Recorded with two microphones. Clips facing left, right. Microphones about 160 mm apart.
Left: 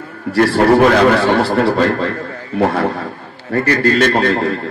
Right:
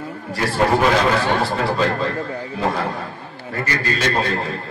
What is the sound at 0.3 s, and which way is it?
A man's voice, 65° left (ahead or behind).